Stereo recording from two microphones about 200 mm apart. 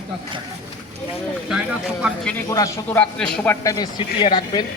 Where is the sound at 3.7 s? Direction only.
20° left (ahead or behind).